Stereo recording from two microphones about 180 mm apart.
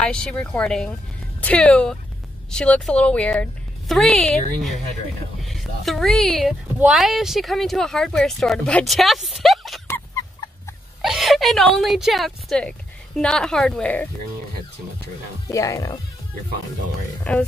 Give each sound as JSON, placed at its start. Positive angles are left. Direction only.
{"t": 0.0, "sound": "speech", "side_deg": 5}
{"t": 5.4, "sound": "speech", "side_deg": 0}
{"t": 9.8, "sound": "chicken", "side_deg": 15}
{"t": 11.0, "sound": "a woman's voice", "side_deg": 0}
{"t": 15.4, "sound": "speech", "side_deg": 20}
{"t": 17.2, "sound": "speech", "side_deg": 5}